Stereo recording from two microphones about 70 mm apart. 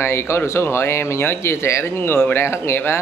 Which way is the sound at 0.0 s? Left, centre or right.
Left.